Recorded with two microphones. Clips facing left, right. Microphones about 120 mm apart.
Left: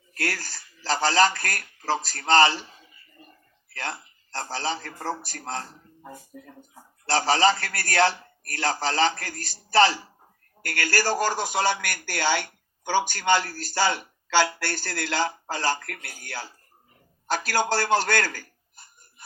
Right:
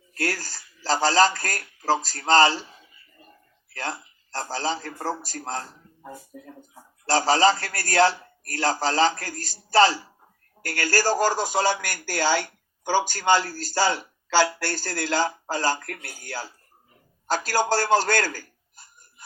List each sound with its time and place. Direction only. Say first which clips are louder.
0.2 s a man's voice: right 2 dB; 40° right (ahead or behind)
3.8 s a man's voice: right 2 dB; 45° right (ahead or behind)
7.1 s a man's voice: right 2 dB; 40° right (ahead or behind)
10.7 s speech: right 2 dB; 40° right (ahead or behind)
17.3 s speech: right 2 dB; 40° right (ahead or behind)